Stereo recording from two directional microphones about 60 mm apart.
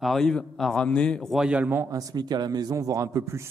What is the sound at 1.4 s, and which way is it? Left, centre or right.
Speech, centre.